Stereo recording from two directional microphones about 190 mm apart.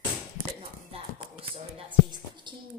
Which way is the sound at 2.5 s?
25° right (ahead or behind).